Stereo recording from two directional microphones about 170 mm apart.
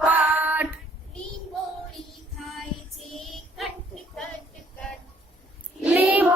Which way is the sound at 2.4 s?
Centre (ahead or behind).